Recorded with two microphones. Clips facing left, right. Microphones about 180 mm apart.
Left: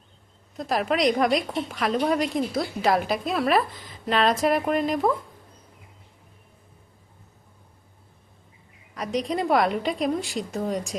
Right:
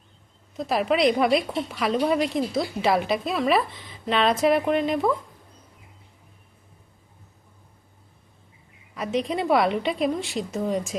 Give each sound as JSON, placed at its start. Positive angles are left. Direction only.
{"t": 0.5, "sound": "a woman's voice", "side_deg": 0}
{"t": 9.0, "sound": "a woman's voice", "side_deg": 0}